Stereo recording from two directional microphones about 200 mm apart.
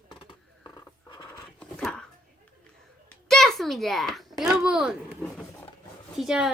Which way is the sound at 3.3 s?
Centre (ahead or behind).